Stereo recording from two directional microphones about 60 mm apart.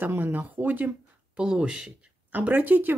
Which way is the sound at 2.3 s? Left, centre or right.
Right.